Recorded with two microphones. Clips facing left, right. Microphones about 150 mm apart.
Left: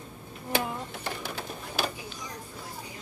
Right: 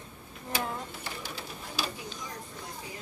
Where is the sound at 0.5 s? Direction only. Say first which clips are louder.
Left 3 dB; 55° left (ahead or behind).